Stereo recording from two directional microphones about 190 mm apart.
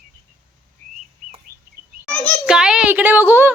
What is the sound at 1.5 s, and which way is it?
Bird, 55° right (ahead or behind).